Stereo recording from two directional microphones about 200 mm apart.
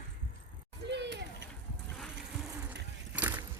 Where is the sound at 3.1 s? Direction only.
10° right (ahead or behind).